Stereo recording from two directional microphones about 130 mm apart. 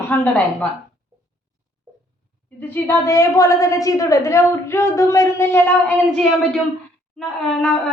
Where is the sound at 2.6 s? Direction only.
15° left (ahead or behind).